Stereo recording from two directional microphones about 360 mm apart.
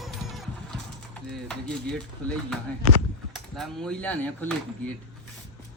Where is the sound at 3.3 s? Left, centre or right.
Centre.